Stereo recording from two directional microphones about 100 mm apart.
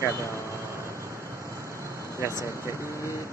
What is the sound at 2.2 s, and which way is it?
Speech, 30° right (ahead or behind).